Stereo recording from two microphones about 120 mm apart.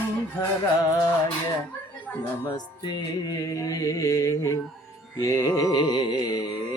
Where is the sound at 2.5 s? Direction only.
35° left (ahead or behind).